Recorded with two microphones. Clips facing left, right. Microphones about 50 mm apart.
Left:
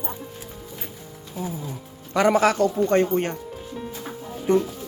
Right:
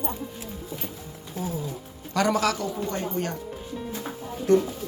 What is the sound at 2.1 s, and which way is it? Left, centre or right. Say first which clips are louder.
Speech: left 5 dB; left.